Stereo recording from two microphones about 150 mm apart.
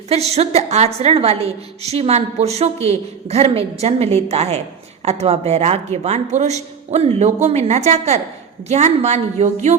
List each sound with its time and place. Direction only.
0.1 s a woman's voice: 45° right (ahead or behind)